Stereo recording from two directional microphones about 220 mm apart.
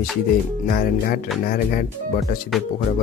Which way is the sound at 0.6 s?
40° left (ahead or behind).